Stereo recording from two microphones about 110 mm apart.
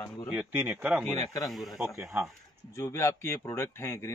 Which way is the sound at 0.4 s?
15° right (ahead or behind).